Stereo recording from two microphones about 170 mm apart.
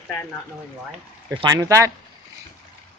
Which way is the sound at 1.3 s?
25° right (ahead or behind).